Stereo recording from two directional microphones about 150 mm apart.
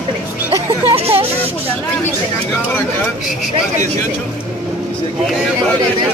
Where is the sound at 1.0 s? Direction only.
40° right (ahead or behind).